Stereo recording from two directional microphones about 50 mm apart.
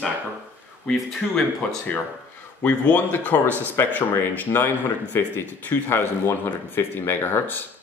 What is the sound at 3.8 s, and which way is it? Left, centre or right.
Speech, left.